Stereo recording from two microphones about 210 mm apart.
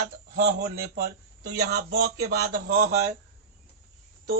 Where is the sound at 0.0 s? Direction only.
50° right (ahead or behind).